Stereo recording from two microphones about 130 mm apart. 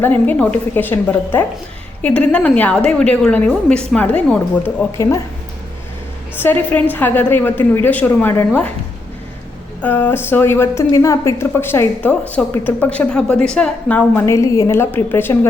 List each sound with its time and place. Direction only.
0.0 s a woman's voice: 15° left (ahead or behind)
4.9 s speech: 25° left (ahead or behind)
6.3 s a woman's voice: 15° left (ahead or behind)
9.8 s a woman's voice: 15° left (ahead or behind)